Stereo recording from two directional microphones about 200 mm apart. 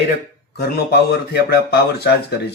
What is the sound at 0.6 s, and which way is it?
Speech, 50° left (ahead or behind).